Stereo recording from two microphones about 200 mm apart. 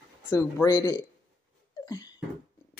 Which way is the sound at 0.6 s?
15° left (ahead or behind).